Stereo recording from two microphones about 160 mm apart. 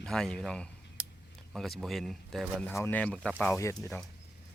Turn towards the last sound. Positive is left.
turn(degrees=20)  # may be behind; listen again after turning